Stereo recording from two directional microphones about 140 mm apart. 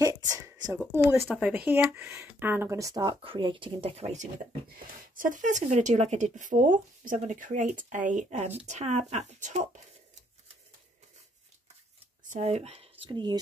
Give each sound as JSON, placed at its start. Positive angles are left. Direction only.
{"t": 0.0, "sound": "a sound", "side_deg": -25}
{"t": 0.9, "sound": "speech", "side_deg": -15}
{"t": 3.0, "sound": "speech", "side_deg": -40}
{"t": 4.6, "sound": "speech", "side_deg": -75}
{"t": 12.3, "sound": "speech", "side_deg": -55}